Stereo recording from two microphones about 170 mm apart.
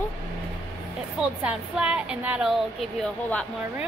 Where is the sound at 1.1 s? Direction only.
5° right (ahead or behind).